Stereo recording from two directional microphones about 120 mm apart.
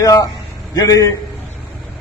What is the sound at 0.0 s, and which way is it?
A man's voice, 30° left (ahead or behind).